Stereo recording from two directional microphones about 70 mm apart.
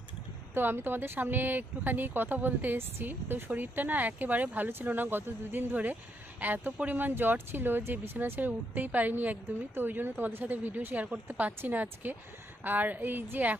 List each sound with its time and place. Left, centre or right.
0.5 s speech: right